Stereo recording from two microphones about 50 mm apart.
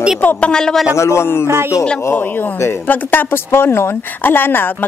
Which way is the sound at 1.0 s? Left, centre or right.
Left.